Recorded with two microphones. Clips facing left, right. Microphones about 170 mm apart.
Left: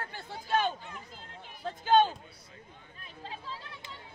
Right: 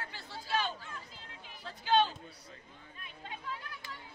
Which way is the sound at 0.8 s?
20° left (ahead or behind).